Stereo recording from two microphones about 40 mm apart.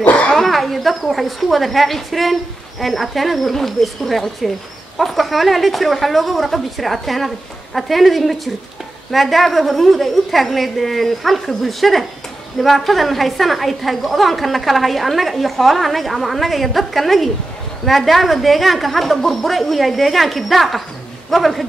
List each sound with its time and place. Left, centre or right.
0.0 s speech: left
0.3 s a woman's voice: centre